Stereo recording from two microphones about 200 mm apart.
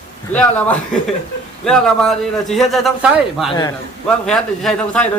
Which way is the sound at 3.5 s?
20° left (ahead or behind).